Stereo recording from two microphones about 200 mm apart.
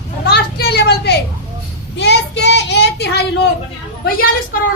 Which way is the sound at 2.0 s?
60° left (ahead or behind).